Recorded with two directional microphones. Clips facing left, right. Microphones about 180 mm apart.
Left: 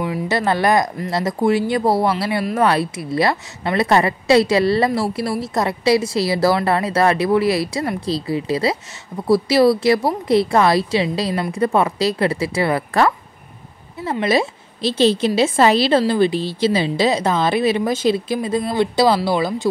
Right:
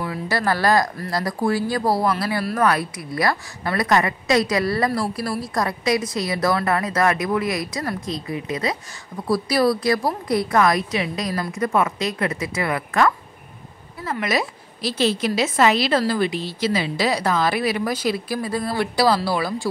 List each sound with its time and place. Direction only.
0.0 s a woman's voice: 20° left (ahead or behind)